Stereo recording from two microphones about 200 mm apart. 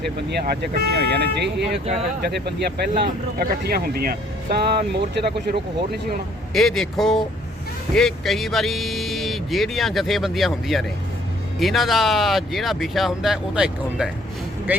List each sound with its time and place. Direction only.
0.3 s speech: 55° right (ahead or behind)
6.5 s speech: centre (ahead or behind)